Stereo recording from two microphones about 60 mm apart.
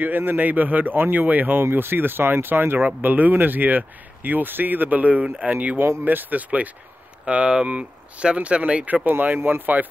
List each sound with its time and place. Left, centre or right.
0.0 s speech: right
9.0 s speech: right